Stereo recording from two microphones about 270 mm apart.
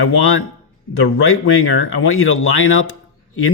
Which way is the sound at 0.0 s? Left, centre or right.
Left.